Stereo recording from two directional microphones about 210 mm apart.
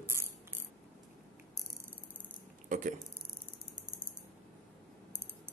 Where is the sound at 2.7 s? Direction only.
35° right (ahead or behind).